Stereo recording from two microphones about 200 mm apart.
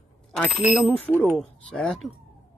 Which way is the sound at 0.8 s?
10° left (ahead or behind).